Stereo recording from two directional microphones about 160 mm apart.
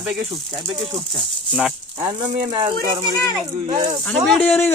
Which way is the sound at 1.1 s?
Centre (ahead or behind).